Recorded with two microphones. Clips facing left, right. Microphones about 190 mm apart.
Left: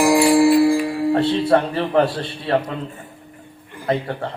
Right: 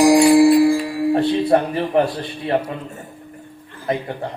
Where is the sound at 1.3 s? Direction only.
15° right (ahead or behind).